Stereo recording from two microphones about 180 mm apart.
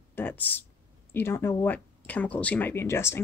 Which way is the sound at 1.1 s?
15° left (ahead or behind).